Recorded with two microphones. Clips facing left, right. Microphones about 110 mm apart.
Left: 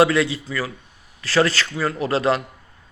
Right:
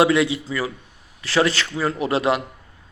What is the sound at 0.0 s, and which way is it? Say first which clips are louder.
A man's voice: even; 15° right (ahead or behind).